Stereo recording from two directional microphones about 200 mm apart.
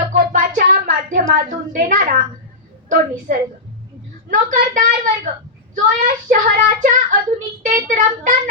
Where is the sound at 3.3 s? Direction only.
45° right (ahead or behind).